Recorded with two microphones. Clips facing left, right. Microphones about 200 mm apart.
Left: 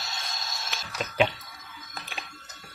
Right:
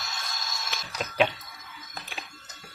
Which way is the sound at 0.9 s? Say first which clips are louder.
Even; centre (ahead or behind).